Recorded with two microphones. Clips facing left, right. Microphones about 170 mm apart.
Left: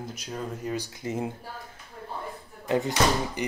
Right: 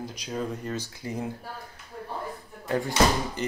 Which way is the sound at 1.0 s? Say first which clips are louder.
Left 3 dB; 20° left (ahead or behind).